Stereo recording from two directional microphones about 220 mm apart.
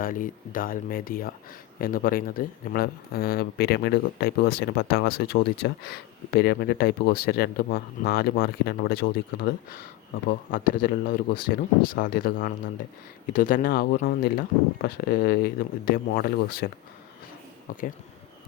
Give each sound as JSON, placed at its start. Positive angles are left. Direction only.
{"t": 0.0, "sound": "speech", "side_deg": 40}
{"t": 17.7, "sound": "speech", "side_deg": 40}